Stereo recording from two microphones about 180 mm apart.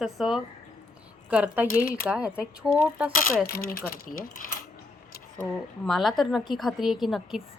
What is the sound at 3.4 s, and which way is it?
Speech, 55° left (ahead or behind).